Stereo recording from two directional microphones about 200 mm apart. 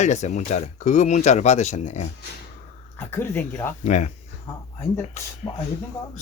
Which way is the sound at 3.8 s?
35° left (ahead or behind).